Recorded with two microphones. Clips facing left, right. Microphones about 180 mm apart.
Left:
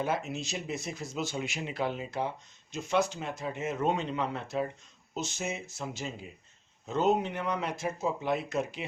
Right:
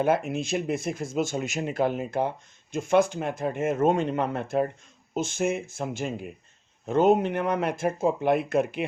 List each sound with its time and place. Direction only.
0.0 s speech: 55° right (ahead or behind)